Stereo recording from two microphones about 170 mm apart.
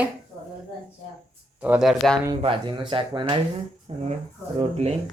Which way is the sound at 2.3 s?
30° right (ahead or behind).